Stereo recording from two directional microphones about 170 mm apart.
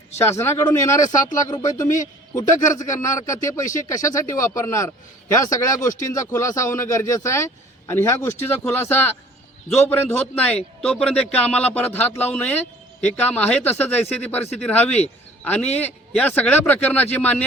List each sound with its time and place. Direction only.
0.2 s speech: 15° left (ahead or behind)